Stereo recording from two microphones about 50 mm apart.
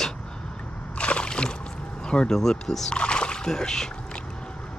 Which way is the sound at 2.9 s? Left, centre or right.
Centre.